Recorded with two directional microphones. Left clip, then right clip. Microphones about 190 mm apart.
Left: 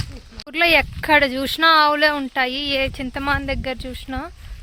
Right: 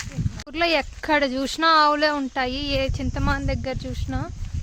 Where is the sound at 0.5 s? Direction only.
Centre (ahead or behind).